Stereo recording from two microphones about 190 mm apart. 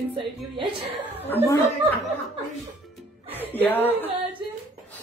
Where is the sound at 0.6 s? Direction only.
30° right (ahead or behind).